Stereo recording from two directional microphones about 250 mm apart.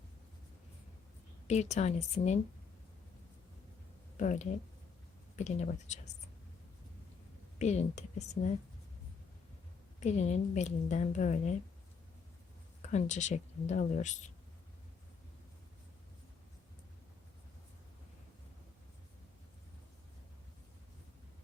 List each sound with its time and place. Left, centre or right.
1.5 s a woman's voice: left
4.2 s a woman's voice: left
7.6 s a woman's voice: left
10.0 s a woman's voice: left
12.9 s a woman's voice: left